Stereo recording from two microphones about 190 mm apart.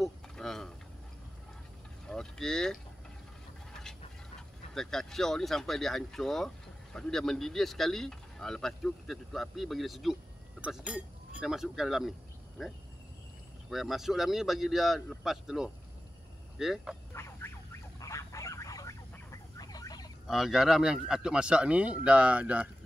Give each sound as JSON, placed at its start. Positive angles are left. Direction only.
{"t": 0.0, "sound": "a sound", "side_deg": 0}
{"t": 2.0, "sound": "speech", "side_deg": 5}
{"t": 4.7, "sound": "speech", "side_deg": 0}
{"t": 17.1, "sound": "a sound", "side_deg": 15}
{"t": 17.9, "sound": "vehicle", "side_deg": 15}
{"t": 20.2, "sound": "speech", "side_deg": 0}